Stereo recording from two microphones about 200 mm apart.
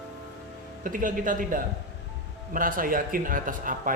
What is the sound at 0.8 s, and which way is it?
Speech, 45° right (ahead or behind).